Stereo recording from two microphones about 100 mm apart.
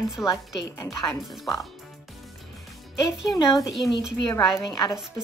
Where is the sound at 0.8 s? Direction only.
30° left (ahead or behind).